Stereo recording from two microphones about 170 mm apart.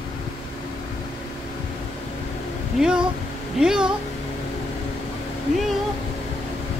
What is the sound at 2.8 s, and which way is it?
Speech, 5° right (ahead or behind).